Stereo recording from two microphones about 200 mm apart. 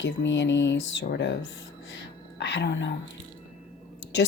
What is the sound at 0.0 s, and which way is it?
Speech, 60° left (ahead or behind).